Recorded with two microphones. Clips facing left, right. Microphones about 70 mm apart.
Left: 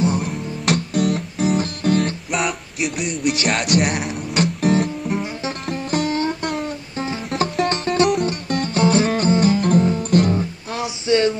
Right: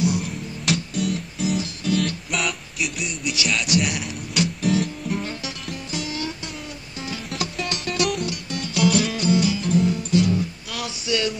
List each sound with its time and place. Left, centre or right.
0.0 s music: left
0.3 s music: left
10.8 s a sound: left